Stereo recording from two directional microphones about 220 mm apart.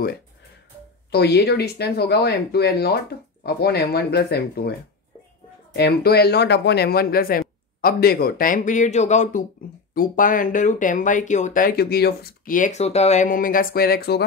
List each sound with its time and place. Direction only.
1.1 s speech: 50° left (ahead or behind)
5.8 s speech: 45° left (ahead or behind)